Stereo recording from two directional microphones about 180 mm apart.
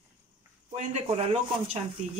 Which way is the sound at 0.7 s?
35° right (ahead or behind).